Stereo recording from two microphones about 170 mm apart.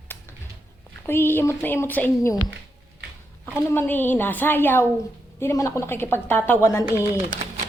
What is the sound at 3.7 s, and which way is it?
A woman's voice, 10° left (ahead or behind).